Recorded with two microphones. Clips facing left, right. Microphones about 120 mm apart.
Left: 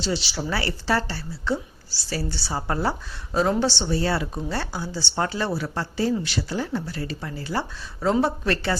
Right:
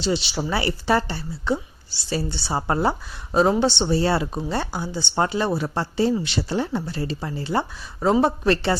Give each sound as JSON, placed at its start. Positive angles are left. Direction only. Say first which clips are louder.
{"t": 0.0, "sound": "speech", "louder": "right 3 dB", "side_deg": -20}